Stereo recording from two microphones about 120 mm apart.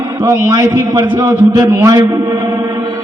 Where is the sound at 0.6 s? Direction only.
30° right (ahead or behind).